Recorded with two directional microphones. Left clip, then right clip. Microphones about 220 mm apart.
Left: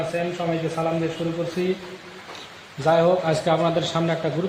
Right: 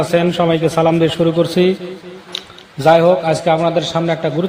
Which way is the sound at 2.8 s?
30° right (ahead or behind).